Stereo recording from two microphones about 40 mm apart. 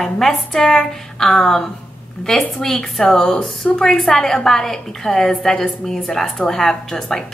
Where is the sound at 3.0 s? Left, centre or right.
Centre.